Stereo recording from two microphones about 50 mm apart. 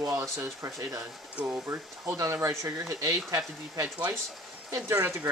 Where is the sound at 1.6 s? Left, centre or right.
Right.